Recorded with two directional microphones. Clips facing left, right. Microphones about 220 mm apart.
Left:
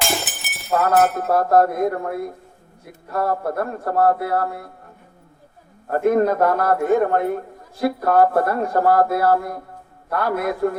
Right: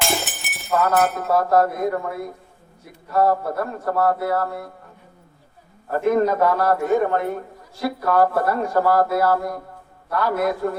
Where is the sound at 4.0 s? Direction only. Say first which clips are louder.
Left 2 dB; 55° left (ahead or behind).